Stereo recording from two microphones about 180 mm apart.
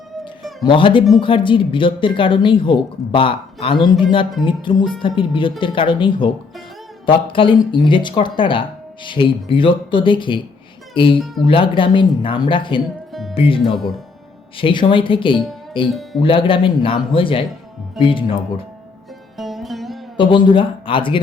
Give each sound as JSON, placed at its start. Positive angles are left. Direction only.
{"t": 0.6, "sound": "speech", "side_deg": 30}
{"t": 15.9, "sound": "speech", "side_deg": 0}
{"t": 16.2, "sound": "speech", "side_deg": 30}
{"t": 19.4, "sound": "music", "side_deg": 0}
{"t": 20.1, "sound": "speech", "side_deg": 25}